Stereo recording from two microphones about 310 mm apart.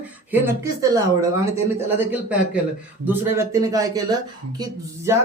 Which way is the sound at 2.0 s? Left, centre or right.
Centre.